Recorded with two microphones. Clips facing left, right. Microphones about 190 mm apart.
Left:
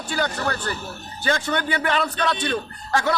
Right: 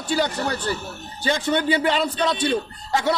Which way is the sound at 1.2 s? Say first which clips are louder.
Right 3 dB; 20° right (ahead or behind).